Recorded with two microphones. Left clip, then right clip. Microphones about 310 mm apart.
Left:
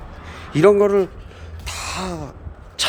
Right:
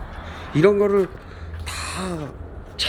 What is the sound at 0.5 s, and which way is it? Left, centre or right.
Speech, centre.